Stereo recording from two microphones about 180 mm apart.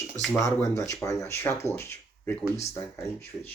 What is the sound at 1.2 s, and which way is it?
Speech, 15° left (ahead or behind).